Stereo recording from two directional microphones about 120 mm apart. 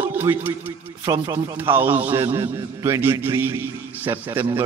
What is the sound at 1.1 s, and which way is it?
Speech, 30° right (ahead or behind).